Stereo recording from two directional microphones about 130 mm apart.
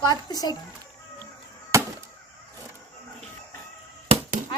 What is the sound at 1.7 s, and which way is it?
Honk, 20° right (ahead or behind).